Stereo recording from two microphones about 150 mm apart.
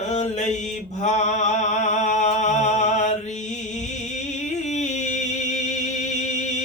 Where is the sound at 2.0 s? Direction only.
50° left (ahead or behind).